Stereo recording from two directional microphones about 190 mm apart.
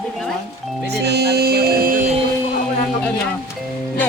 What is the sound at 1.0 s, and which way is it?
Music, 60° right (ahead or behind).